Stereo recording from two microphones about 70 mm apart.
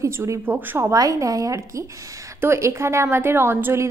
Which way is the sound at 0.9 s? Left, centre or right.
Right.